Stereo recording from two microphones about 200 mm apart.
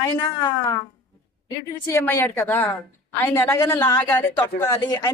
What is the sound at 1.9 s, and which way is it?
A woman's voice, 10° left (ahead or behind).